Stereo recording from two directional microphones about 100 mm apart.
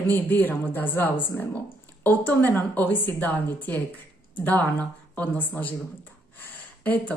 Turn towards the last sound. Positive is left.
turn(degrees=15)  # may be behind; listen again after turning